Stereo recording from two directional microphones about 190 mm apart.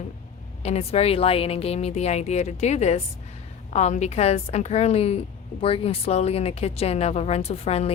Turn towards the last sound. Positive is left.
turn(degrees=35)  # may be behind; listen again after turning